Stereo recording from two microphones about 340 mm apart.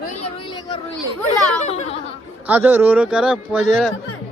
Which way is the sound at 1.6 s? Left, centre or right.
Centre.